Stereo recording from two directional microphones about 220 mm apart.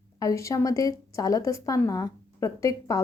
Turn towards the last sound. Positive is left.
turn(degrees=15)  # may be behind; listen again after turning